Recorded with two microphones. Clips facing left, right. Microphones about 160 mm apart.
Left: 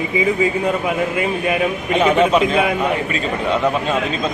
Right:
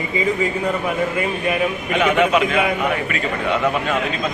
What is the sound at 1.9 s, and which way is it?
Speech, 30° left (ahead or behind).